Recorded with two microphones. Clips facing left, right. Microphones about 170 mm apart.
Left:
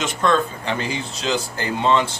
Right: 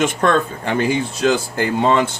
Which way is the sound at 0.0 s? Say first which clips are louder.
Right 3 dB; 55° right (ahead or behind).